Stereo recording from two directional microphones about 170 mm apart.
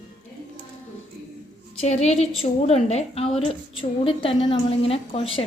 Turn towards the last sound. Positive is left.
turn(degrees=35)  # may be behind; listen again after turning